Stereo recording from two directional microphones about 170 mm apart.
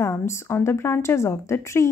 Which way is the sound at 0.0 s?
15° left (ahead or behind).